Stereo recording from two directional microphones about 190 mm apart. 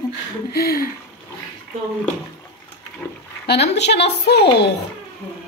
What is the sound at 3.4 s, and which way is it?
A woman's voice, 60° left (ahead or behind).